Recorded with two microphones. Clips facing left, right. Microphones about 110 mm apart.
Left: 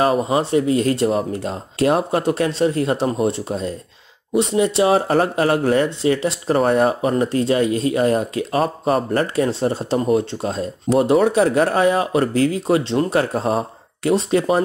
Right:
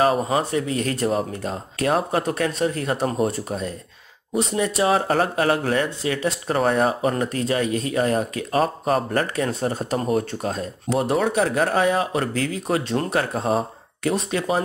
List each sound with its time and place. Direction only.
0.3 s speech: 30° left (ahead or behind)
6.6 s speech: 40° left (ahead or behind)